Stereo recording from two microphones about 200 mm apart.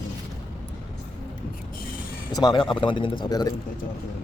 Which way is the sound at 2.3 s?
20° left (ahead or behind).